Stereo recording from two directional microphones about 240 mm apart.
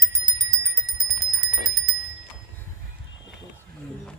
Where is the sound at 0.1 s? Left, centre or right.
Centre.